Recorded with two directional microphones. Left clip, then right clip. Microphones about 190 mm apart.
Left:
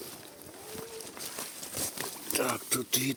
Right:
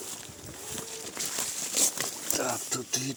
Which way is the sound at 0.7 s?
50° right (ahead or behind).